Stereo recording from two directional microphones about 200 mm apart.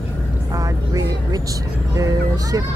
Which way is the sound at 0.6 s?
15° right (ahead or behind).